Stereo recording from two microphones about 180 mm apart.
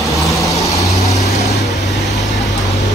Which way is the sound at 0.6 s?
20° left (ahead or behind).